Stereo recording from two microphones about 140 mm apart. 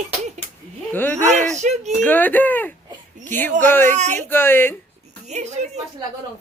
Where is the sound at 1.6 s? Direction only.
55° right (ahead or behind).